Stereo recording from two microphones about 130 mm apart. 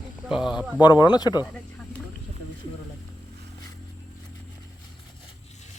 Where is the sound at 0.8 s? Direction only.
35° left (ahead or behind).